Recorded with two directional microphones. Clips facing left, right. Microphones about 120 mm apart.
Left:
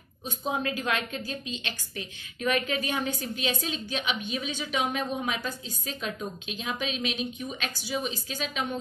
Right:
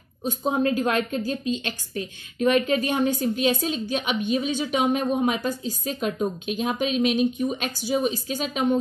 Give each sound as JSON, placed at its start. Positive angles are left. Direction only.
{"t": 0.2, "sound": "a woman's voice", "side_deg": -40}